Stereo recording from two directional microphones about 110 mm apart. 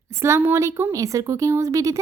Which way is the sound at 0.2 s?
25° right (ahead or behind).